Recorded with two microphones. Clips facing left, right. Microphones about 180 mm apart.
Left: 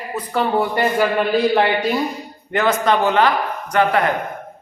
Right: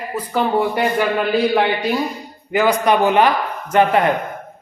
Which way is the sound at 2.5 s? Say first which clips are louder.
Right 2 dB; 10° right (ahead or behind).